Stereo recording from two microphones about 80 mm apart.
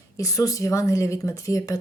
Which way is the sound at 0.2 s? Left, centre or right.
Left.